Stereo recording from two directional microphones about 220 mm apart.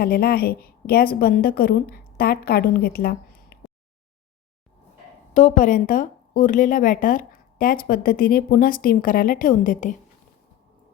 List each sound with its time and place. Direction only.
0.0 s a woman's voice: 45° left (ahead or behind)
5.3 s speech: 35° left (ahead or behind)